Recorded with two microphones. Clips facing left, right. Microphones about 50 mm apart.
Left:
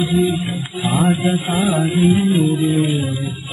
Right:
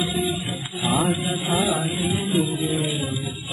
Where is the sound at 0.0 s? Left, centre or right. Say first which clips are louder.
Left 7 dB; centre.